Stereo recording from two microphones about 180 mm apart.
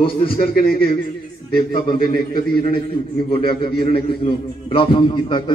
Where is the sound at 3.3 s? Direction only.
30° left (ahead or behind).